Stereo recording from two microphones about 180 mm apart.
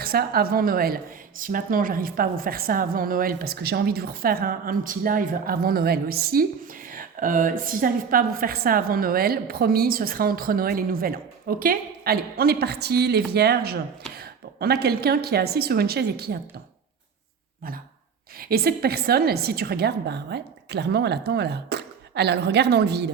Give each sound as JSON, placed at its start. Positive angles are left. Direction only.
{"t": 0.0, "sound": "a woman's voice", "side_deg": -55}
{"t": 18.3, "sound": "a woman's voice", "side_deg": -55}